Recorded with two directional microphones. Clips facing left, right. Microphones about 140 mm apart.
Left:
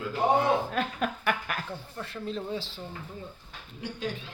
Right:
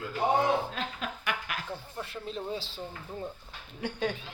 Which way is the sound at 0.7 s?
50° left (ahead or behind).